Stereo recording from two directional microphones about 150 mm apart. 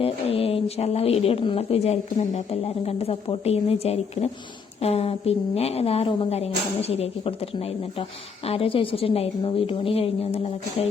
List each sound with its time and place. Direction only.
0.0 s speech: 40° left (ahead or behind)